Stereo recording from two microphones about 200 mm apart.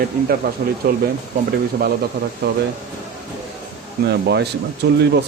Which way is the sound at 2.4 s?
55° right (ahead or behind).